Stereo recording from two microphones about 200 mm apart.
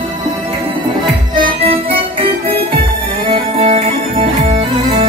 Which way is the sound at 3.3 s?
30° right (ahead or behind).